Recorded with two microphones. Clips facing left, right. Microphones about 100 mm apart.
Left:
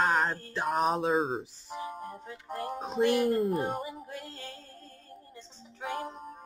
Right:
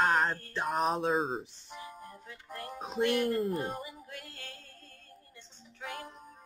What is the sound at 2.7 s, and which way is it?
Speech, centre (ahead or behind).